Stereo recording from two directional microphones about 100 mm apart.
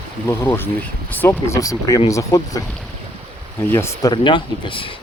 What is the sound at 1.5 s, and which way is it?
Speech, 35° left (ahead or behind).